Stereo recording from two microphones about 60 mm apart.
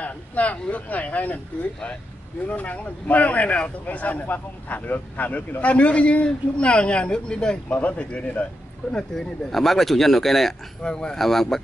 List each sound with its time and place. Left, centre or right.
0.0 s speech: left
2.4 s speech: left
8.9 s speech: centre